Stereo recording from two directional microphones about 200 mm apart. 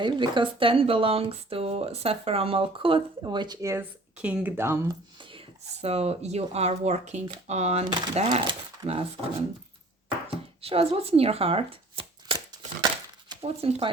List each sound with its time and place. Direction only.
0.0 s speech: 25° right (ahead or behind)
5.8 s speech: 30° right (ahead or behind)
10.6 s speech: 30° right (ahead or behind)
12.8 s a sound: 20° right (ahead or behind)